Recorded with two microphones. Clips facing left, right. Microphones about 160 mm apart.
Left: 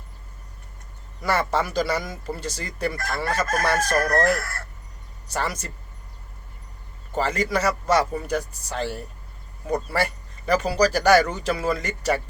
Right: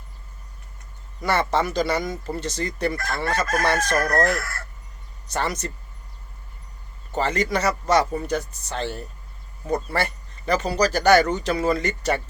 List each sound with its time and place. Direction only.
1.2 s speech: 5° left (ahead or behind)
3.6 s chicken: 5° left (ahead or behind)
5.3 s speech: 5° left (ahead or behind)
7.1 s speech: 5° left (ahead or behind)